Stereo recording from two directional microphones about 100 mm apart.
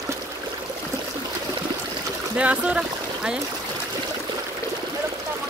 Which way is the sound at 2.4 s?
10° right (ahead or behind).